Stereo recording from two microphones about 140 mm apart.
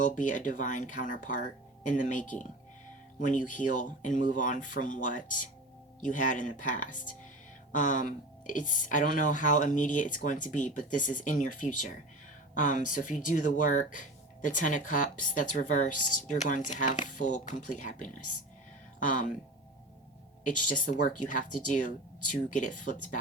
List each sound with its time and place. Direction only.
0.0 s speech: 65° left (ahead or behind)
20.4 s speech: 70° left (ahead or behind)